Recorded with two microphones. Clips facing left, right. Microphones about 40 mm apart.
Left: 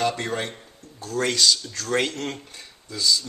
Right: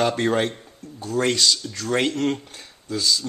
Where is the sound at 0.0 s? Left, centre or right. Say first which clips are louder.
Right 5 dB; right.